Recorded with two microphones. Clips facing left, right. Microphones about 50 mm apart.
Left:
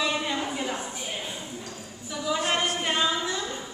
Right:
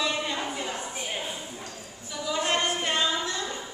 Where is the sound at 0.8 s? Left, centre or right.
Centre.